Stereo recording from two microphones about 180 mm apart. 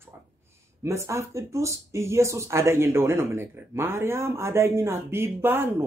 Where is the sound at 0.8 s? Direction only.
15° right (ahead or behind).